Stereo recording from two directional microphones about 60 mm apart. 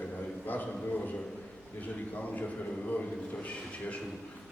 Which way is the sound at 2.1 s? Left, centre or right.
Left.